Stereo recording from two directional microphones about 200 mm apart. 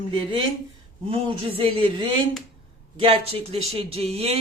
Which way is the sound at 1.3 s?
25° right (ahead or behind).